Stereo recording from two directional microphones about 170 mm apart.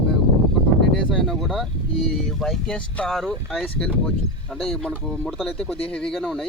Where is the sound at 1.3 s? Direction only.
Centre (ahead or behind).